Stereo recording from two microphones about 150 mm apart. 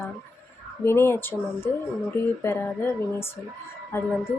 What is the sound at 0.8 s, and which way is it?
A woman's voice, 15° left (ahead or behind).